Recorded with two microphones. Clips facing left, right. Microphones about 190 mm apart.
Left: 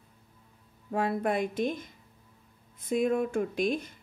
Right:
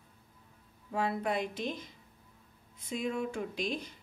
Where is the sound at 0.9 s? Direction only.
50° left (ahead or behind).